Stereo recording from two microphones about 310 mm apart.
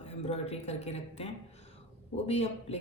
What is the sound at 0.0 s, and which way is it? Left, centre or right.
Speech, centre.